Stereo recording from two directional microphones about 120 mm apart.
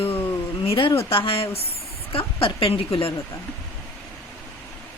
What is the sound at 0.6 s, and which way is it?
Speech, 50° left (ahead or behind).